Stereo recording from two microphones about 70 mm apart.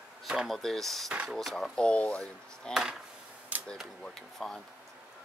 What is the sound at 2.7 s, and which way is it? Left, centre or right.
Speech, centre.